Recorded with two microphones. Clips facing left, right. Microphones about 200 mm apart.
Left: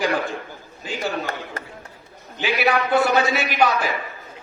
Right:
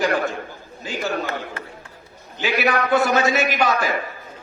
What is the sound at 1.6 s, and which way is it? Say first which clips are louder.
Chop: even; 40° left (ahead or behind).